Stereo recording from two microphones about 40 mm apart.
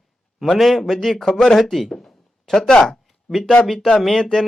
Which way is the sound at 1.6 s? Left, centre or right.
Centre.